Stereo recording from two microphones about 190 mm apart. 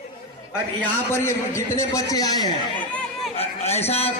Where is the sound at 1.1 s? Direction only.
15° left (ahead or behind).